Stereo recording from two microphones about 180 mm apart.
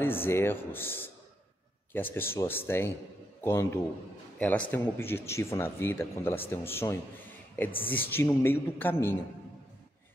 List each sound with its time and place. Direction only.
0.0 s speech: 10° left (ahead or behind)